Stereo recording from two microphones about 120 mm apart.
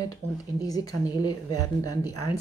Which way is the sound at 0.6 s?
30° left (ahead or behind).